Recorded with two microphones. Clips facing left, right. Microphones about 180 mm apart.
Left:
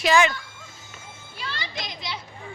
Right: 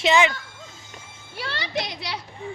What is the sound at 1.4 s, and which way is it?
Children playing, 65° right (ahead or behind).